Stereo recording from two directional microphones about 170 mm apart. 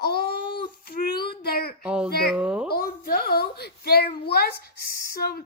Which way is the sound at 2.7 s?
60° left (ahead or behind).